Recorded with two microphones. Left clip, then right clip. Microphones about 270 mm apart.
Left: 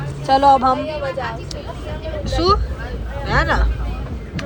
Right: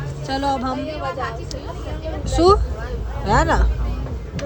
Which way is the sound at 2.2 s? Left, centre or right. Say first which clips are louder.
Right 2 dB; centre.